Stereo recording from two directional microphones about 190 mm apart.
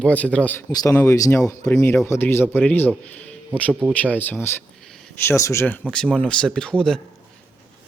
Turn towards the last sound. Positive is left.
turn(degrees=5)  # may be behind; listen again after turning